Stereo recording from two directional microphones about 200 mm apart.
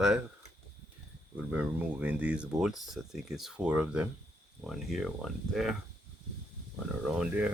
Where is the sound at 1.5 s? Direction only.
10° right (ahead or behind).